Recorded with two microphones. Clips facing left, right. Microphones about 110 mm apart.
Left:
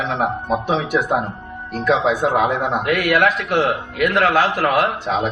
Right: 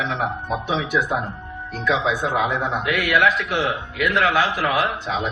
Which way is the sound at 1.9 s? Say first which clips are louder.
Left 4 dB; 50° left (ahead or behind).